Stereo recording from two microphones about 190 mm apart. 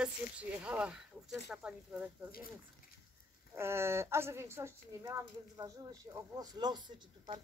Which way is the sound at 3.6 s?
15° right (ahead or behind).